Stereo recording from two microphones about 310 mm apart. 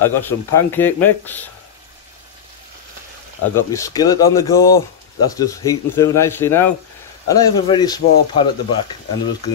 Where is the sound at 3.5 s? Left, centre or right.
Centre.